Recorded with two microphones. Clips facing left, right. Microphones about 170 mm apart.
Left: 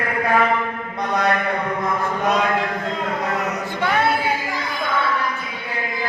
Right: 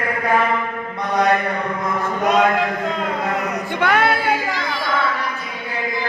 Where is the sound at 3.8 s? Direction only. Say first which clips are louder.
Right 3 dB; 80° right.